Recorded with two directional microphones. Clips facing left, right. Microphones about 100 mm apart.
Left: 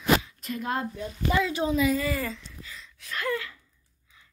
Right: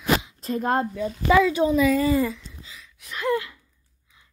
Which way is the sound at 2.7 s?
15° right (ahead or behind).